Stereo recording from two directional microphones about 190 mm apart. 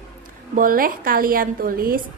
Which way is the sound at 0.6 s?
50° right (ahead or behind).